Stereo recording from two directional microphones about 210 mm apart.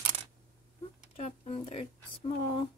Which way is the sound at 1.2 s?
30° left (ahead or behind).